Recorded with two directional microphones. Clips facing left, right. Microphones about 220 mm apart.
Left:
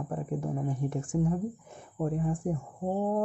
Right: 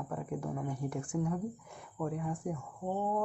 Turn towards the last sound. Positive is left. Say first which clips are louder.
# left 5 dB
turn(degrees=35)  # may be behind; listen again after turning